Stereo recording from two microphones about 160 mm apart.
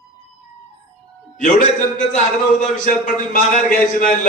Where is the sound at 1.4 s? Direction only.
55° left (ahead or behind).